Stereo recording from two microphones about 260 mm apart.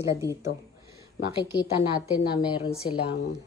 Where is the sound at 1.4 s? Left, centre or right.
Centre.